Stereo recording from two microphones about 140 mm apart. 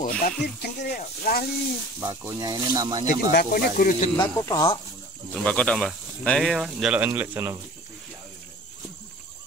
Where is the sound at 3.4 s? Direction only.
75° left (ahead or behind).